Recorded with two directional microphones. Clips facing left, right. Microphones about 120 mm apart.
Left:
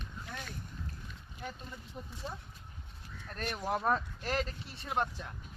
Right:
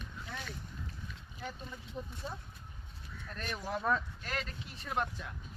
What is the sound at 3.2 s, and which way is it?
Speech, 40° left (ahead or behind).